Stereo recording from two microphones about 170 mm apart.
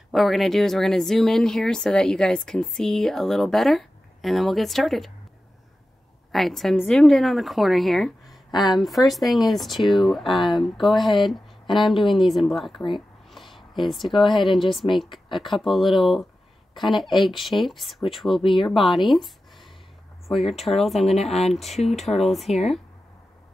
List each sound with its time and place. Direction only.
0.1 s speech: centre (ahead or behind)
6.3 s speech: centre (ahead or behind)
13.3 s a sound: centre (ahead or behind)
14.3 s speech: centre (ahead or behind)
18.4 s speech: 30° left (ahead or behind)
18.7 s speech: centre (ahead or behind)
21.1 s speech: 40° left (ahead or behind)
21.6 s speech: centre (ahead or behind)